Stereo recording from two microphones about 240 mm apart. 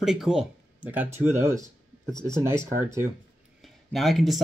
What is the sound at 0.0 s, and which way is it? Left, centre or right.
Speech, centre.